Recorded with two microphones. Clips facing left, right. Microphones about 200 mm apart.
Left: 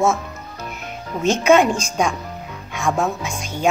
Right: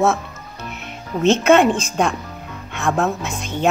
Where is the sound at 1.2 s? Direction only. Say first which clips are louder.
Right 1 dB; 10° left (ahead or behind).